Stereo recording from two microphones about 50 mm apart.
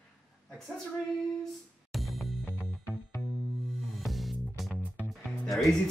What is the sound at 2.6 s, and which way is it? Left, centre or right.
Music, centre.